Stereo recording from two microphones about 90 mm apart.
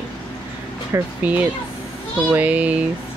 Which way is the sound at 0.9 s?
35° right (ahead or behind).